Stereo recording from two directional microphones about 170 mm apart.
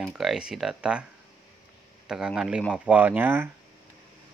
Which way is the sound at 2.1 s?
5° right (ahead or behind).